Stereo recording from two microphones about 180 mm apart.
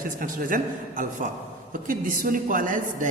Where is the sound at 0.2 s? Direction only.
50° right (ahead or behind).